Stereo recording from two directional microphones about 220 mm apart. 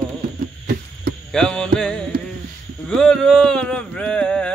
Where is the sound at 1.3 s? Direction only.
5° left (ahead or behind).